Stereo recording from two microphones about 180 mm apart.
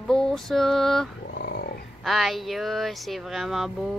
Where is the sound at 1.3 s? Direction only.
60° left (ahead or behind).